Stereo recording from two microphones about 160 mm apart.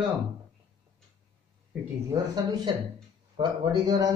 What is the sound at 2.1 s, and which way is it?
A man's voice, 25° right (ahead or behind).